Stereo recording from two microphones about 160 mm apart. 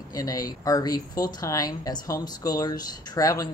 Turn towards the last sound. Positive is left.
turn(degrees=20)  # may be behind; listen again after turning